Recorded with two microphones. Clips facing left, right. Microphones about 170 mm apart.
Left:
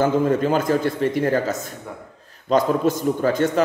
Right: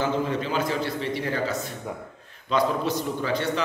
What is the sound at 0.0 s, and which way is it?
A man's voice, 45° left (ahead or behind).